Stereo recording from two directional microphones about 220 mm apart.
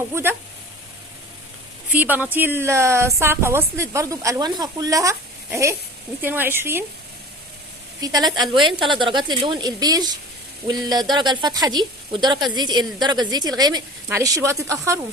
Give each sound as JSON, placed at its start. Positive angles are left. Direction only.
{"t": 0.1, "sound": "speech", "side_deg": -10}
{"t": 1.9, "sound": "speech", "side_deg": -10}
{"t": 8.0, "sound": "speech", "side_deg": -20}